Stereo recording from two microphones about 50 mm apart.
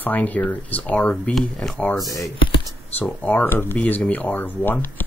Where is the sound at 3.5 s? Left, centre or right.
Left.